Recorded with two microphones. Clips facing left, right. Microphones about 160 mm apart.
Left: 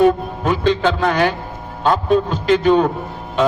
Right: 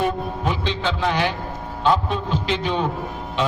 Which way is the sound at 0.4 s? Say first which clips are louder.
Left 9 dB; 45° left (ahead or behind).